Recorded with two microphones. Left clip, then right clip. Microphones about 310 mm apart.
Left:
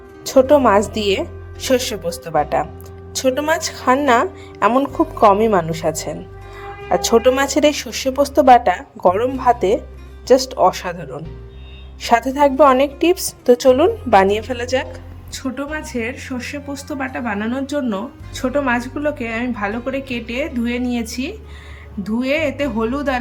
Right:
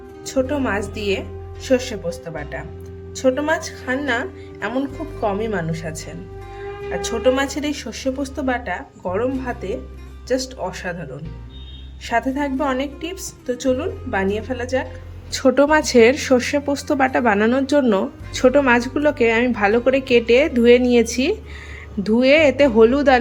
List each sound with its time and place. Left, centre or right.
0.3 s a woman's voice: centre
15.3 s speech: centre